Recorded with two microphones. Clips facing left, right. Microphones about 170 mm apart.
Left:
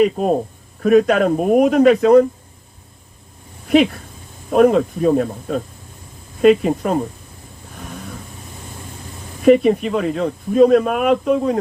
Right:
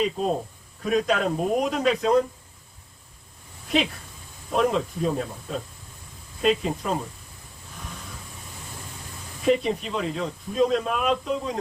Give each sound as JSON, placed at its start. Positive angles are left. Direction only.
{"t": 0.0, "sound": "speech", "side_deg": 60}
{"t": 4.5, "sound": "speech", "side_deg": 55}
{"t": 9.4, "sound": "speech", "side_deg": 55}